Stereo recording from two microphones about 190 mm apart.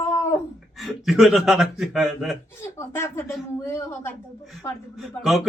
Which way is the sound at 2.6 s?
15° left (ahead or behind).